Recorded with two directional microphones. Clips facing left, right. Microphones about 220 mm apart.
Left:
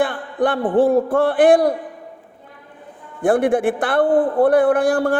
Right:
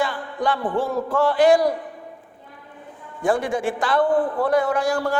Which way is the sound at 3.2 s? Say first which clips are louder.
Left 6 dB; 55° left (ahead or behind).